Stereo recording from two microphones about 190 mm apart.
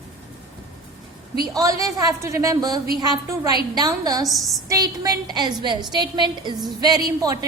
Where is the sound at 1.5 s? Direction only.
15° right (ahead or behind).